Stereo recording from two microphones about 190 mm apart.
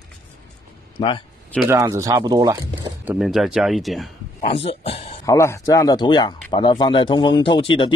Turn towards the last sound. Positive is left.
turn(degrees=25)  # may be behind; listen again after turning